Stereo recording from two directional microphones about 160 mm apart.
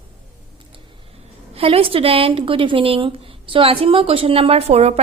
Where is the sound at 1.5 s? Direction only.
35° right (ahead or behind).